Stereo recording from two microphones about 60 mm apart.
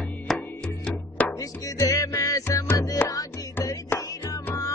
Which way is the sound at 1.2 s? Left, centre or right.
Left.